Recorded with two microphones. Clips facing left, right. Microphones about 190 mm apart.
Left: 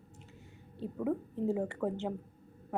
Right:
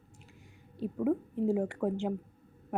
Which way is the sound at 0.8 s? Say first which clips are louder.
Right 4 dB; 10° right (ahead or behind).